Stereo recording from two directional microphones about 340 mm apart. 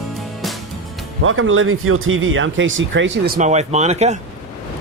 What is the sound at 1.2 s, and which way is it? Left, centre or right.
Speech, right.